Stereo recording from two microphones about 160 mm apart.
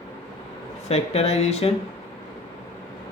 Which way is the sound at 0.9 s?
40° left (ahead or behind).